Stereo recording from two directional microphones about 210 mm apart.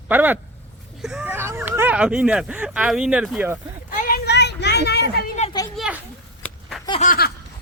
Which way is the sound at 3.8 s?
40° left (ahead or behind).